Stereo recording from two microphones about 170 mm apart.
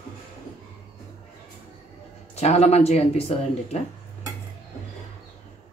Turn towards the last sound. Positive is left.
turn(degrees=40)  # may be behind; listen again after turning